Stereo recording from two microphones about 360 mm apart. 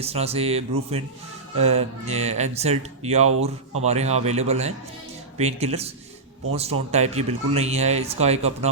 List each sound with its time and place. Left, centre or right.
0.0 s speech: centre